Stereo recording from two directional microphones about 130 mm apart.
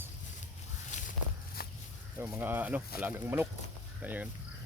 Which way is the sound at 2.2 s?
20° right (ahead or behind).